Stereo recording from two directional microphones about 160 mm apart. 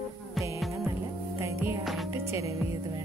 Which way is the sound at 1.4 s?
15° right (ahead or behind).